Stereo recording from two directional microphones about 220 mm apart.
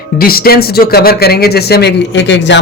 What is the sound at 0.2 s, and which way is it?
Speech, 45° left (ahead or behind).